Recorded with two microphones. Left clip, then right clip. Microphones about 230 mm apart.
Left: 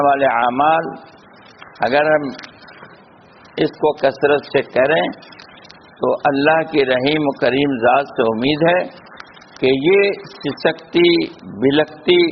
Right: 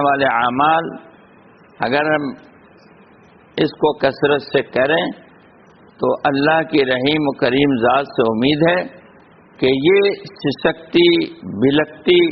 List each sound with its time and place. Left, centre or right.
0.0 s a man's voice: right
3.5 s a man's voice: right